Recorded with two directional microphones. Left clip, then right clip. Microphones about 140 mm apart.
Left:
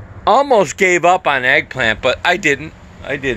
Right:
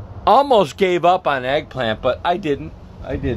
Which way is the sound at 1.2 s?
15° left (ahead or behind).